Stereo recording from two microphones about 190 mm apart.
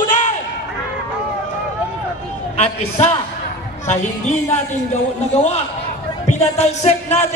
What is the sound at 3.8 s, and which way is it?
Music, 35° left (ahead or behind).